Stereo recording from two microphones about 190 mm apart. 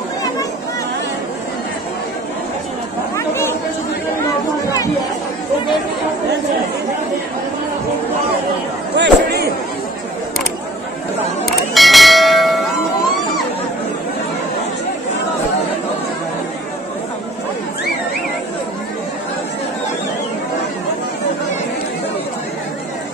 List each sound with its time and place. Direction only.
3.2 s chatter: 15° left (ahead or behind)
8.9 s a sound: 60° right (ahead or behind)
11.4 s church bell: centre (ahead or behind)